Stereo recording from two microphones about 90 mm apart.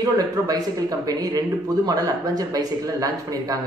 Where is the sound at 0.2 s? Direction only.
45° right (ahead or behind).